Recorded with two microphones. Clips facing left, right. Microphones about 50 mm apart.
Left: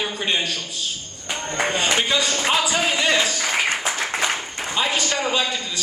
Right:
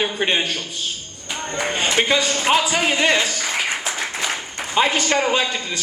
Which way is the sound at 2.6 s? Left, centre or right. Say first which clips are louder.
Right 2 dB; right.